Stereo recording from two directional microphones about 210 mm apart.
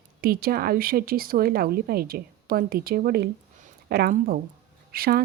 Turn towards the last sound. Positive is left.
turn(degrees=-45)  # may be behind; listen again after turning